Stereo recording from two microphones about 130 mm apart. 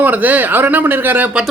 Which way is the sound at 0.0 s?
15° right (ahead or behind).